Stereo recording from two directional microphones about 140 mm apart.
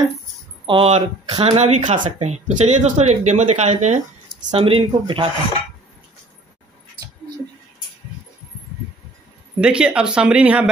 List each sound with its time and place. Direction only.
0.7 s speech: 45° right (ahead or behind)
4.5 s speech: 40° right (ahead or behind)
9.6 s speech: 5° right (ahead or behind)